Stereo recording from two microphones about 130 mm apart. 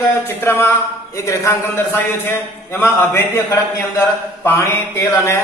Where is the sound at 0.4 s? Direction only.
20° left (ahead or behind).